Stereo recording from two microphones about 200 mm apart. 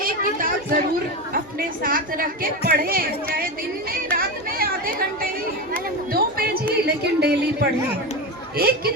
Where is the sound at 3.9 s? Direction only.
50° right (ahead or behind).